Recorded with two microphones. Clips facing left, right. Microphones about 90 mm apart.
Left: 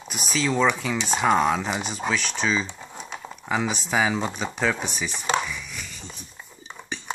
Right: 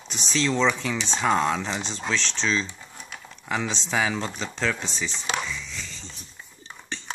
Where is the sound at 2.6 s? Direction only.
25° left (ahead or behind).